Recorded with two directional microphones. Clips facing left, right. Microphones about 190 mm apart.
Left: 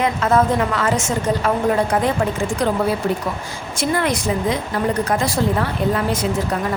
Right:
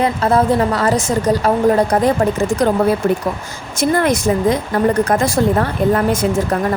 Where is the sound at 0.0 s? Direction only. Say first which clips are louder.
Right 2 dB; 35° right (ahead or behind).